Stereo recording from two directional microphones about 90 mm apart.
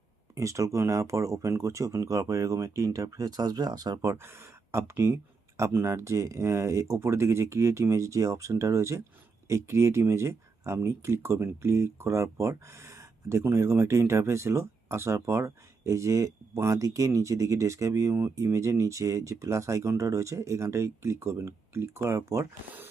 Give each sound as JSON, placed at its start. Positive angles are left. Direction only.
{"t": 0.3, "sound": "speech", "side_deg": -35}
{"t": 4.0, "sound": "speech", "side_deg": -25}